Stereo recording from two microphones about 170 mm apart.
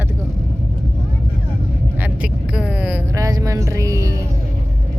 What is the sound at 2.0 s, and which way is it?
Music, 5° right (ahead or behind).